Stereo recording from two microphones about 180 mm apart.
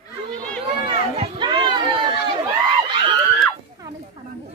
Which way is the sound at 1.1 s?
30° right (ahead or behind).